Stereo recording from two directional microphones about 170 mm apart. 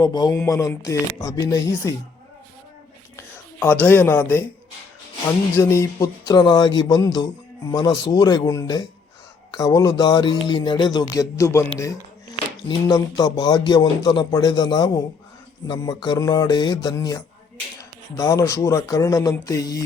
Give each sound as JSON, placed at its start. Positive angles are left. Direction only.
{"t": 0.0, "sound": "a man's voice", "side_deg": 25}
{"t": 3.2, "sound": "speech", "side_deg": 10}
{"t": 5.5, "sound": "a man's voice", "side_deg": 15}